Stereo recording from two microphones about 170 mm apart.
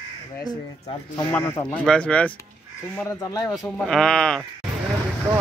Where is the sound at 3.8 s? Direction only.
5° left (ahead or behind).